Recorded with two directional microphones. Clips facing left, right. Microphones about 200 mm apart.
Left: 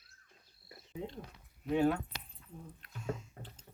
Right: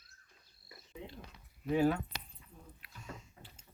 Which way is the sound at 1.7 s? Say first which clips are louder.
Even; centre (ahead or behind).